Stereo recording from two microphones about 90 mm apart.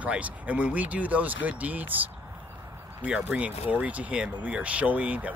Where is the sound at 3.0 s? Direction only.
15° right (ahead or behind).